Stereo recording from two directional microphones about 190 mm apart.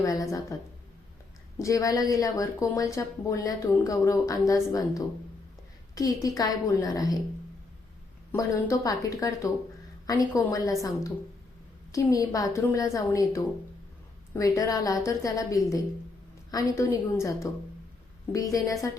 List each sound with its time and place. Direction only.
0.0 s a woman's voice: 20° left (ahead or behind)
1.5 s a woman's voice: 20° left (ahead or behind)
8.3 s a woman's voice: 15° left (ahead or behind)